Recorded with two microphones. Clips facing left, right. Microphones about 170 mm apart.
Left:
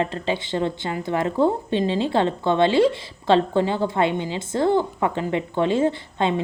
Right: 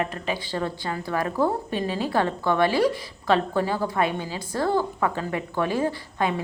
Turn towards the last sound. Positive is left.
turn(degrees=25)  # may be behind; listen again after turning